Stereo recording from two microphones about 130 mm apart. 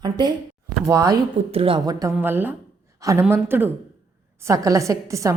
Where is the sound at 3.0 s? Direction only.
25° right (ahead or behind).